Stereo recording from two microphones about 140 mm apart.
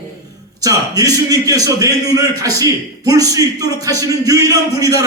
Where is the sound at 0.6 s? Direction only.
25° right (ahead or behind).